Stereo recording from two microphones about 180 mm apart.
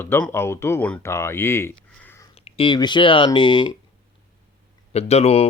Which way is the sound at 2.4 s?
30° left (ahead or behind).